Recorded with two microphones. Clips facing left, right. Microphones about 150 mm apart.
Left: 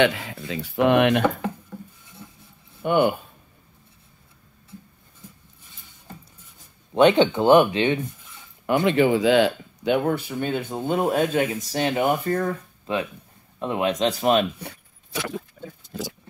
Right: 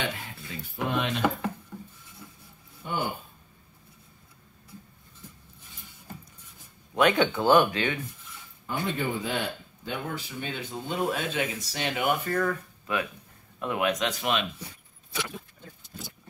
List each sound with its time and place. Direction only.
0.0 s speech: 90° left; by 1.2 s 70° left (ahead or behind)
2.8 s speech: 65° left (ahead or behind)
6.9 s speech: 30° left (ahead or behind)
8.6 s speech: 85° left; by 14.5 s 40° left (ahead or behind)
15.9 s vehicle: 90° left